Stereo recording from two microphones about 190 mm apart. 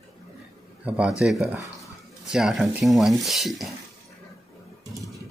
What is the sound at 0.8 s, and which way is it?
A man's voice, 5° right (ahead or behind).